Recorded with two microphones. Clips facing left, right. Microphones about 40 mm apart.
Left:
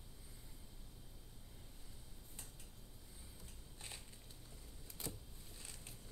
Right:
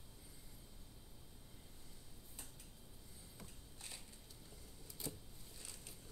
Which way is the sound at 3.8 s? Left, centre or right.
Left.